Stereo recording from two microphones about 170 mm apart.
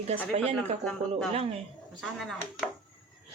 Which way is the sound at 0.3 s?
40° right (ahead or behind).